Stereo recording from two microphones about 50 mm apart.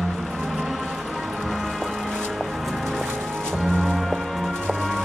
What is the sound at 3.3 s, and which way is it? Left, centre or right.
Music, centre.